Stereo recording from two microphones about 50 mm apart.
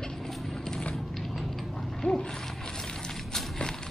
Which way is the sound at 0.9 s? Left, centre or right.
Centre.